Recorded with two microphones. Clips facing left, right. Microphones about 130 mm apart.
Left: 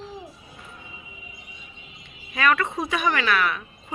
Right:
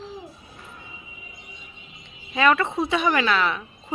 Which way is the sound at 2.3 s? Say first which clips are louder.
Right 2 dB; 25° right (ahead or behind).